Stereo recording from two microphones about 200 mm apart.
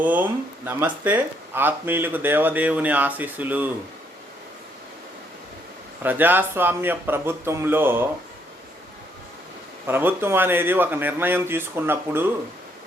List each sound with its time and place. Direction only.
0.0 s speech: 10° right (ahead or behind)
6.0 s speech: 10° right (ahead or behind)
9.8 s speech: 10° right (ahead or behind)